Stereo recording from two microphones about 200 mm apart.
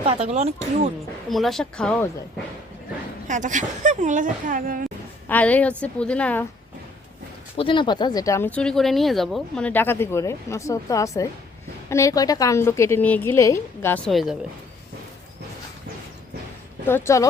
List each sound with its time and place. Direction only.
0.0 s a woman's voice: 30° right (ahead or behind)
1.3 s speech: centre (ahead or behind)
3.2 s a woman's voice: 40° right (ahead or behind)
5.3 s speech: 5° left (ahead or behind)
7.5 s speech: 25° left (ahead or behind); by 14.3 s centre (ahead or behind)
16.8 s speech: 15° left (ahead or behind)